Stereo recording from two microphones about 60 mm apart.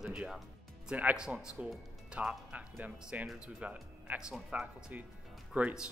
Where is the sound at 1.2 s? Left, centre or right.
Centre.